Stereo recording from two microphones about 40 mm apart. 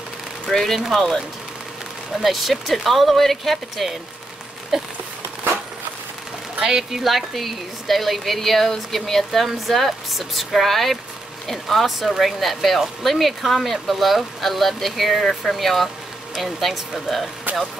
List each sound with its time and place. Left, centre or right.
0.5 s speech: centre
2.1 s speech: centre
6.6 s speech: centre
7.0 s speech: centre